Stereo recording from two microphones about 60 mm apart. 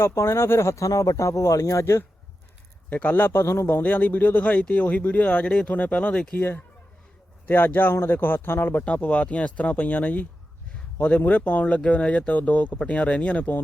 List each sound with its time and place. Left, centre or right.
0.0 s speech: left
0.9 s speech: left
2.9 s a man's voice: left
3.8 s a man's voice: left
8.8 s speech: left